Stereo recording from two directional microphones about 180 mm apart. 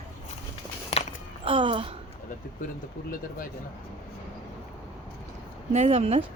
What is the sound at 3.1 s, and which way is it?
Speech, 50° left (ahead or behind).